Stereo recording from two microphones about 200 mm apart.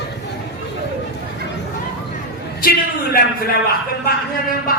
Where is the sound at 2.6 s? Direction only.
50° left (ahead or behind).